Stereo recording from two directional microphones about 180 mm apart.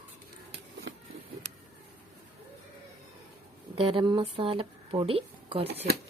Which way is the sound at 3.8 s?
25° right (ahead or behind).